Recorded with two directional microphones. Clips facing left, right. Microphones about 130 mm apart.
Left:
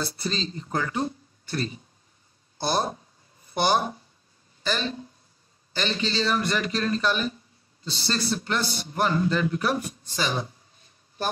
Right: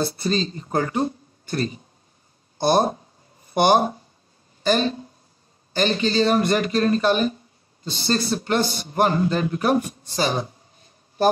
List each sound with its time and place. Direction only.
0.0 s a man's voice: 45° right (ahead or behind)